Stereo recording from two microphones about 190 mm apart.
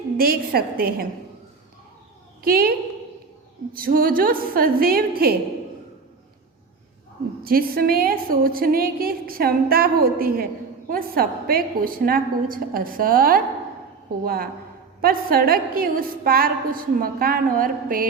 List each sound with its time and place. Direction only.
0.2 s a woman's voice: 50° right (ahead or behind)
2.4 s a woman's voice: 50° right (ahead or behind)
7.4 s a woman's voice: 50° right (ahead or behind)